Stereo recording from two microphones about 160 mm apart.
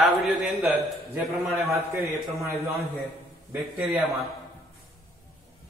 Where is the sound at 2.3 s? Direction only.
20° right (ahead or behind).